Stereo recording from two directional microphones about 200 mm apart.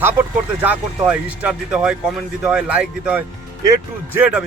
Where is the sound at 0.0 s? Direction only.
10° right (ahead or behind).